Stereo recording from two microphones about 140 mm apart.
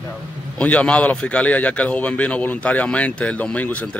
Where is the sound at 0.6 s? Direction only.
10° left (ahead or behind).